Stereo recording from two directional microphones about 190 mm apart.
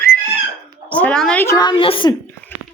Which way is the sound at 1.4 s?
20° left (ahead or behind).